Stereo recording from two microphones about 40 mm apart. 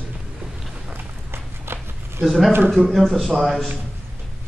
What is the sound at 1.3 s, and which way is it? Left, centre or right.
Walk, right.